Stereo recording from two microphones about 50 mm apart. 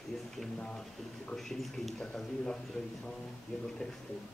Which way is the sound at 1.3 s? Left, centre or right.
Centre.